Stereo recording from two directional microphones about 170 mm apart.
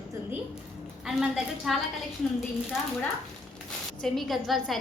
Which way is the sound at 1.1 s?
Centre (ahead or behind).